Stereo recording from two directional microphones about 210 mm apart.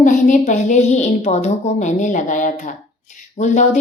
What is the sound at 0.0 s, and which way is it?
A woman's voice, 35° left (ahead or behind).